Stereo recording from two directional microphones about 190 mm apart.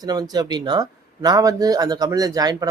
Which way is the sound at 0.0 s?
20° right (ahead or behind).